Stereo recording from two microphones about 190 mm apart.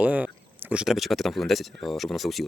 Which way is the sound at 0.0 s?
5° right (ahead or behind).